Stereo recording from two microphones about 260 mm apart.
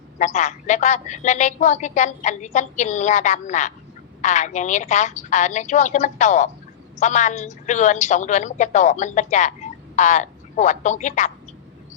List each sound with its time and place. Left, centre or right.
0.2 s a woman's voice: left